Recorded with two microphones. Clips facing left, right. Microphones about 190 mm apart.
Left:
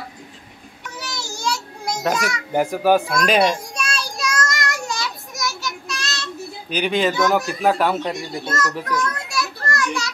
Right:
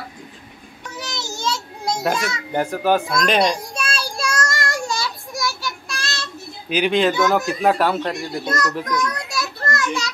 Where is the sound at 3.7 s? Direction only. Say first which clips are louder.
Right 1 dB; 30° right (ahead or behind).